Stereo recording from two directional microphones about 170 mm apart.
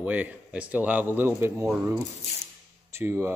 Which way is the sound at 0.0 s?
10° right (ahead or behind).